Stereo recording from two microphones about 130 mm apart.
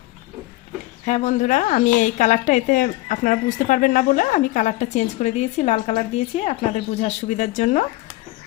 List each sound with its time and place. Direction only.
1.0 s speech: 70° left (ahead or behind)